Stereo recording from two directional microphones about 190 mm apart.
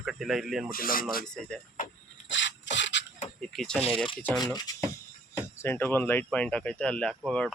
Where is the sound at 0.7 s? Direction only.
50° left (ahead or behind).